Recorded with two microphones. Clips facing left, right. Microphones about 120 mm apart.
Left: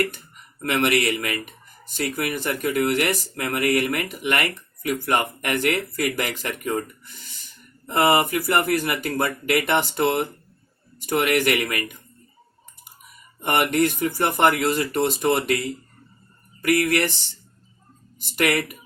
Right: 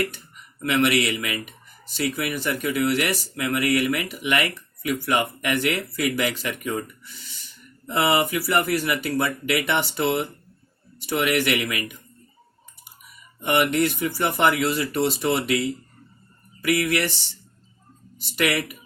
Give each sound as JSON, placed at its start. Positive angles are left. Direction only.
{"t": 0.6, "sound": "speech", "side_deg": 45}
{"t": 13.4, "sound": "speech", "side_deg": 45}
{"t": 16.6, "sound": "speech", "side_deg": 45}
{"t": 18.2, "sound": "speech", "side_deg": 50}